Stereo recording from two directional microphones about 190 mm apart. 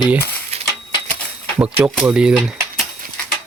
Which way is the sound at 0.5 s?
35° right (ahead or behind).